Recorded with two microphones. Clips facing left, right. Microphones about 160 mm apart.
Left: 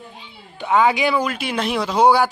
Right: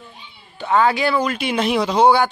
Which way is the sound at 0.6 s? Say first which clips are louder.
Even; 10° left (ahead or behind).